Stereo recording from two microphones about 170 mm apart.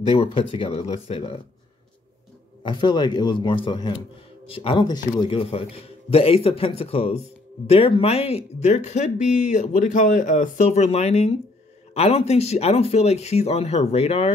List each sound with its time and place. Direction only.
0.1 s speech: 35° left (ahead or behind)
2.6 s speech: 25° left (ahead or behind)